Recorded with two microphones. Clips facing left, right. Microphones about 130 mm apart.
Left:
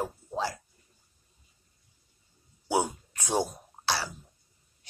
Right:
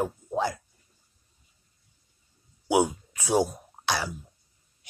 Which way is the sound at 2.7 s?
15° right (ahead or behind).